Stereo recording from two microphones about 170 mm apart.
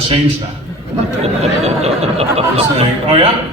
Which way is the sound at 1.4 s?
40° right (ahead or behind).